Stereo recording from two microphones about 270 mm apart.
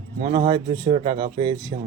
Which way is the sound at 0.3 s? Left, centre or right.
Centre.